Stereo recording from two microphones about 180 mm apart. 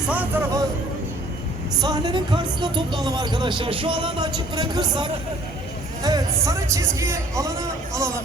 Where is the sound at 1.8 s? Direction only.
25° right (ahead or behind).